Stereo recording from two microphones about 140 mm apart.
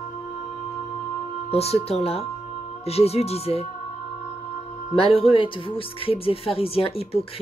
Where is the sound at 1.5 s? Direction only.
45° left (ahead or behind).